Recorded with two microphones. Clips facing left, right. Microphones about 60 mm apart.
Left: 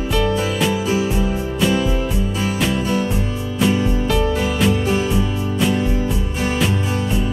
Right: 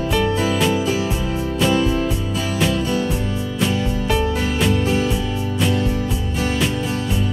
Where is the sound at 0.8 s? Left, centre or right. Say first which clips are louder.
Left 2 dB; centre.